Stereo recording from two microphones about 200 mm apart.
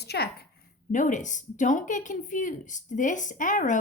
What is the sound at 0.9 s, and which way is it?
Speech, 40° left (ahead or behind).